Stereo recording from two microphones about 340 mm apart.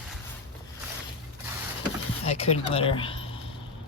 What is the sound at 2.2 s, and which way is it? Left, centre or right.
Speech, centre.